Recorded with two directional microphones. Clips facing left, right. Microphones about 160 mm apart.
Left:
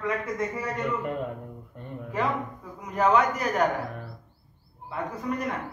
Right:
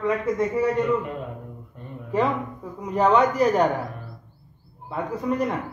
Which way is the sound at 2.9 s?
30° right (ahead or behind).